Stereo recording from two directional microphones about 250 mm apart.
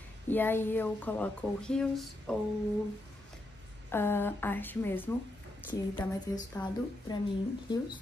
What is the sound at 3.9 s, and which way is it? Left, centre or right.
A woman's voice, centre.